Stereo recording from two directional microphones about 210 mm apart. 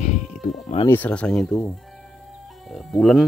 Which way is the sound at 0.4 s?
35° left (ahead or behind).